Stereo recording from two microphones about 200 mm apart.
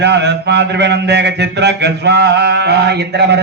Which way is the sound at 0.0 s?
60° right (ahead or behind).